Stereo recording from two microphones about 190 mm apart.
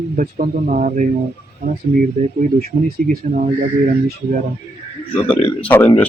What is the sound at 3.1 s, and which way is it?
Speech, 40° right (ahead or behind).